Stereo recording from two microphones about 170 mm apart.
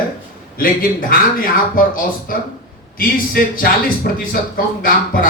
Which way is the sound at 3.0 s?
55° left (ahead or behind).